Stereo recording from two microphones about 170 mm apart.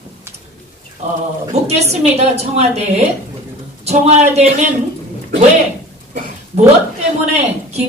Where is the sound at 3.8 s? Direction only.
40° right (ahead or behind).